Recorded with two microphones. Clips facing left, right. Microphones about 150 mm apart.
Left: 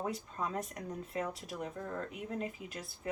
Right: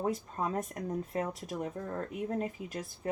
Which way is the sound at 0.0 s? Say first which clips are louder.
Right 5 dB; 45° right (ahead or behind).